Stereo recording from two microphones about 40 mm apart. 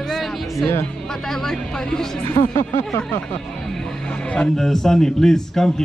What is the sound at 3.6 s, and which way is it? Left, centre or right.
Music, centre.